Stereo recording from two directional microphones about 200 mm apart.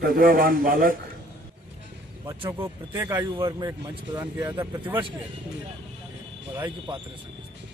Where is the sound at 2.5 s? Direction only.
10° right (ahead or behind).